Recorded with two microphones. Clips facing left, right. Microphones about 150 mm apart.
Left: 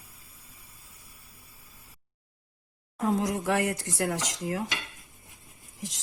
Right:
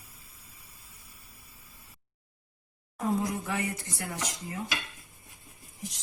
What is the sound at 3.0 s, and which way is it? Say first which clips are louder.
Speech: left 3 dB; 80° left.